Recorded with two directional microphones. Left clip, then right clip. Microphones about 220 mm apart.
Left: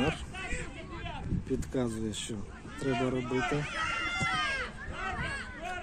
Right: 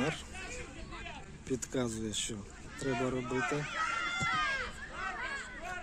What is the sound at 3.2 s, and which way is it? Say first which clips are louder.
Speech: left 3 dB; 45° left (ahead or behind).